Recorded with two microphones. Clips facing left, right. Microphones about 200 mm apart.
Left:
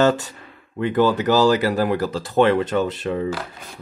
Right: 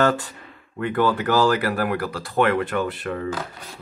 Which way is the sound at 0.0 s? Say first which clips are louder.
Left 3 dB; 20° left (ahead or behind).